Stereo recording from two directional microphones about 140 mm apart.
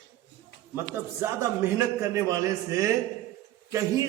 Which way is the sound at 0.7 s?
15° right (ahead or behind).